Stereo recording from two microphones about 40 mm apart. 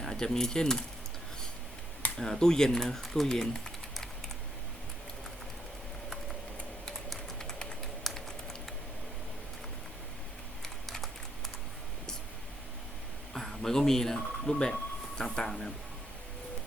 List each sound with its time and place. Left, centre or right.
0.0 s speech: centre
2.1 s speech: centre
3.2 s speech: centre
7.3 s typing: centre
8.1 s typing: centre
13.6 s speech: centre